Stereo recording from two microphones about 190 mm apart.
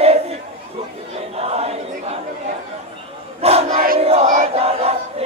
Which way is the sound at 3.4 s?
30° right (ahead or behind).